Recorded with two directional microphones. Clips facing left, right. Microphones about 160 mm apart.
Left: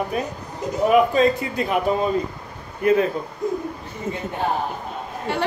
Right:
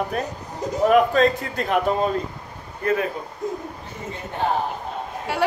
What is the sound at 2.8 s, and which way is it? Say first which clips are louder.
Speech: left 5 dB; 20° left (ahead or behind).